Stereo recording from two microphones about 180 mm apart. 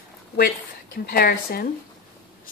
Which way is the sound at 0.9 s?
60° left (ahead or behind).